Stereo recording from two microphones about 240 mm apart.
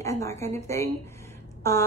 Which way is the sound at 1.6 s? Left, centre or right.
Centre.